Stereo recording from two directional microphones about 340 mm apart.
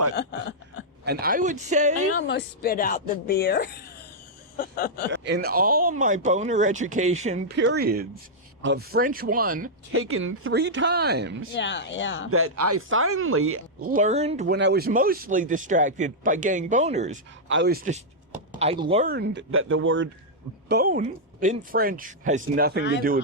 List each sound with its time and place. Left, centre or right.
0.1 s a sound: left
1.0 s speech: right
2.1 s a woman's voice: left
5.1 s speech: right
9.9 s speech: right
11.5 s speech: left
12.3 s speech: right
13.8 s speech: right